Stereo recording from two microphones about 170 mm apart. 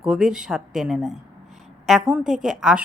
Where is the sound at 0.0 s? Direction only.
5° right (ahead or behind).